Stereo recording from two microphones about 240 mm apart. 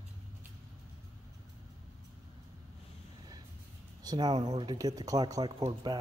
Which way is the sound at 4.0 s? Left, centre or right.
Centre.